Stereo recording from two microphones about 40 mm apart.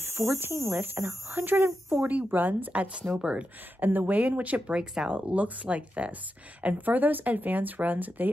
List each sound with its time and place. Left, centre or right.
0.0 s speech: right
1.9 s speech: right
2.7 s speech: right
3.8 s speech: right
4.7 s speech: centre
5.1 s speech: right